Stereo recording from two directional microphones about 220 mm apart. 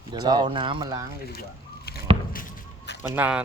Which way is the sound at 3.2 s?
5° right (ahead or behind).